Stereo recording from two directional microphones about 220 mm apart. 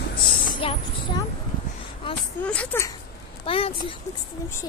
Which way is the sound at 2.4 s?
5° left (ahead or behind).